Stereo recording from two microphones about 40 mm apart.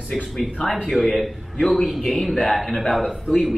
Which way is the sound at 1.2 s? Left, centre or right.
Centre.